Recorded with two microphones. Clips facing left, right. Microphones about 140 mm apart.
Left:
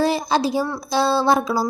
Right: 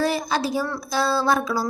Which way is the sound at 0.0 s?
30° left (ahead or behind).